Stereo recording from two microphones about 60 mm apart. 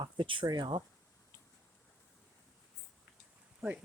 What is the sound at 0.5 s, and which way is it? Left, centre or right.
Speech, right.